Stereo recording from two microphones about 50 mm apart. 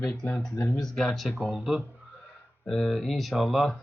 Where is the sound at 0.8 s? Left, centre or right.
Centre.